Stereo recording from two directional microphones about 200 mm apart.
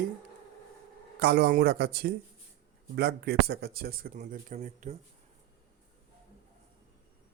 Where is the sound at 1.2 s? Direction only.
55° right (ahead or behind); by 4.9 s 35° right (ahead or behind).